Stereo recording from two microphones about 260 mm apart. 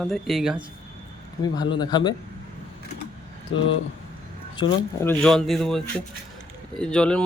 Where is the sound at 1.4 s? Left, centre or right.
Centre.